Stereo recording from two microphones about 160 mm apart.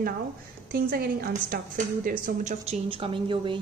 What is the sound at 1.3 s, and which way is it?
A woman's voice, 55° right (ahead or behind).